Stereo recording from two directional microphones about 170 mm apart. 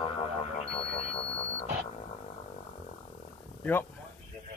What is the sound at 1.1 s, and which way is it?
Music, 35° left (ahead or behind).